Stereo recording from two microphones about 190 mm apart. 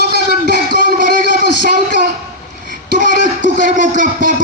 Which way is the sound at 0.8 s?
50° right (ahead or behind).